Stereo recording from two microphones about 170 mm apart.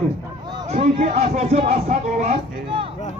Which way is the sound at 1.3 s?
40° right (ahead or behind).